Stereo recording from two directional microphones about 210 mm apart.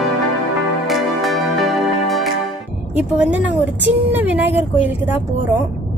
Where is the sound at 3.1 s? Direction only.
5° right (ahead or behind).